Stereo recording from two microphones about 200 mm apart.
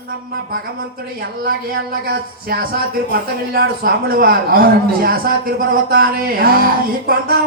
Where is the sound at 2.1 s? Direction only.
50° right (ahead or behind).